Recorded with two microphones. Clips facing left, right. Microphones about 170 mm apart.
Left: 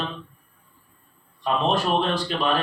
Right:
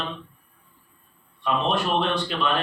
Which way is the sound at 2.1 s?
35° left (ahead or behind).